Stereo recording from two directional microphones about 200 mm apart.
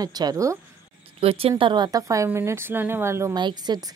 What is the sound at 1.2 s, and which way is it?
A woman's voice, 30° right (ahead or behind).